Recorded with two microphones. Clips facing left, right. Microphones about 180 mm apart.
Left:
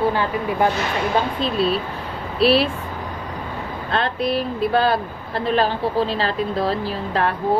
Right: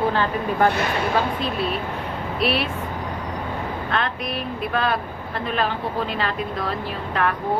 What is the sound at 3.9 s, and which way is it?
A woman's voice, 30° left (ahead or behind).